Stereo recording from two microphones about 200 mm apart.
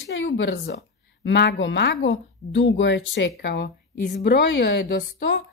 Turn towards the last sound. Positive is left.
turn(degrees=55)  # may be behind; listen again after turning